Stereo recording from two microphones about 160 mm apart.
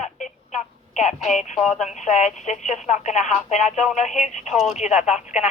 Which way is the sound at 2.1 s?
45° left (ahead or behind).